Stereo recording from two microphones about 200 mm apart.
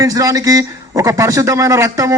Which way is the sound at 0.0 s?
15° right (ahead or behind).